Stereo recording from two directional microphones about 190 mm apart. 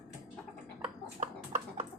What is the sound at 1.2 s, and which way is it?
Horse, 40° right (ahead or behind).